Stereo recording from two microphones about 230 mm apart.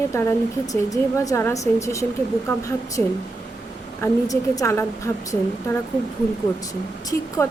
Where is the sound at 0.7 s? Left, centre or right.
Centre.